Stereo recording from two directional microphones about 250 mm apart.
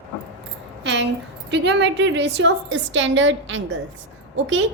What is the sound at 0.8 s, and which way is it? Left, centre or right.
A woman's voice, right.